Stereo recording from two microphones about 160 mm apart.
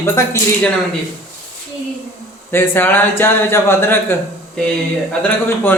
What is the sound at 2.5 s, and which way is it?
Speech, 15° left (ahead or behind).